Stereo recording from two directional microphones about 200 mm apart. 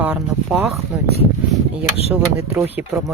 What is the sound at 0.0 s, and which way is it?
Speech, 10° right (ahead or behind).